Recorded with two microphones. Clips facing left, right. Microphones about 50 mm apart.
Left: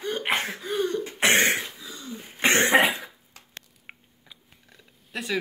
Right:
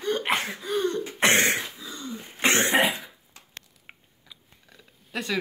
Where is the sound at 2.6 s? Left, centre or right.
Left.